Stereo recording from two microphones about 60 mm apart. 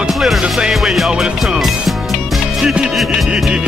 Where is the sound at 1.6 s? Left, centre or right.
Centre.